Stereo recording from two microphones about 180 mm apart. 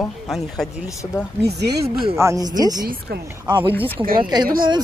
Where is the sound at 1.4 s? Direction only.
65° right (ahead or behind).